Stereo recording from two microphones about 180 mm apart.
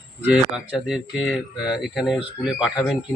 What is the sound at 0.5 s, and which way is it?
Speech, 5° right (ahead or behind).